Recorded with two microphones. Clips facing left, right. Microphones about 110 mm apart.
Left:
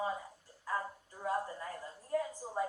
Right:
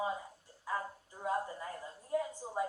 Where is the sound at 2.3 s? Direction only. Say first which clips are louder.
Even; centre (ahead or behind).